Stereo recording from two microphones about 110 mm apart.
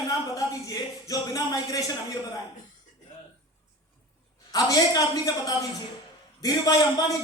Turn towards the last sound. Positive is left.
turn(degrees=35)  # may be behind; listen again after turning